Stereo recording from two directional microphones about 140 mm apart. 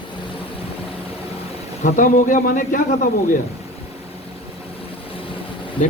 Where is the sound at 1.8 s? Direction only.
70° left (ahead or behind).